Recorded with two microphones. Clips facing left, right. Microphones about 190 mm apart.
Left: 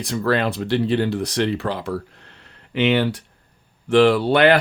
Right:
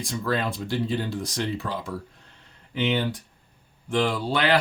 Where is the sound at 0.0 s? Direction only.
70° left (ahead or behind).